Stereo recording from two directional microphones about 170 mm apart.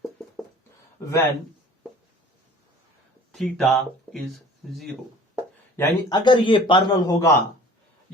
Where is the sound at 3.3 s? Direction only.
Centre (ahead or behind).